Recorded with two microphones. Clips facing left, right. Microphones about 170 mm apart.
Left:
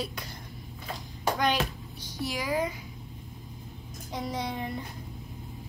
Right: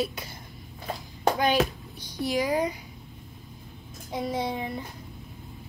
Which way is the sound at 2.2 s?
20° right (ahead or behind).